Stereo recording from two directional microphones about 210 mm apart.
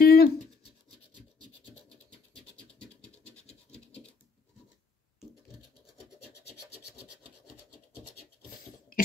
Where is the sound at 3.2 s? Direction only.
30° left (ahead or behind).